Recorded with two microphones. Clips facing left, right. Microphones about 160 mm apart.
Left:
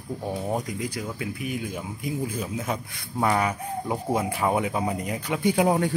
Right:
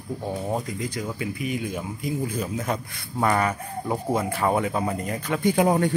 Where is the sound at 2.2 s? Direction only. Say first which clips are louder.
Right 2 dB; 5° left (ahead or behind).